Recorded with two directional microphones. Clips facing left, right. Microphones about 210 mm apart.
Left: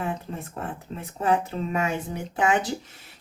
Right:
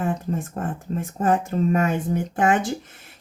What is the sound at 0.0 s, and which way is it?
Speech, 50° right (ahead or behind).